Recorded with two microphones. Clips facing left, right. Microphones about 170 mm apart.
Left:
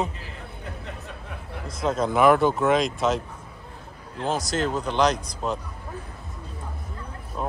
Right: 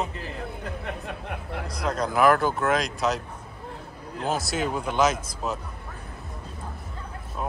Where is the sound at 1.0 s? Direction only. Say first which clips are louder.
Right 4 dB; 65° right (ahead or behind).